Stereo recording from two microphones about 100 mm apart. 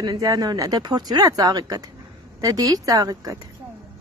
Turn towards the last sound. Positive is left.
turn(degrees=-40)  # may be behind; listen again after turning